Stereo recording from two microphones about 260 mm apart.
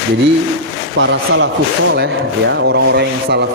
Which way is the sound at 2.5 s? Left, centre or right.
Right.